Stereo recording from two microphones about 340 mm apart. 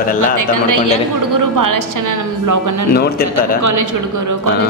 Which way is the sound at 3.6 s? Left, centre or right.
Right.